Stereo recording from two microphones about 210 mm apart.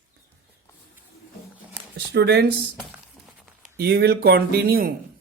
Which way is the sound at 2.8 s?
Centre (ahead or behind).